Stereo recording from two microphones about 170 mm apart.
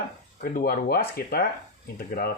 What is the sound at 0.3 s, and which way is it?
Speech, 60° left (ahead or behind).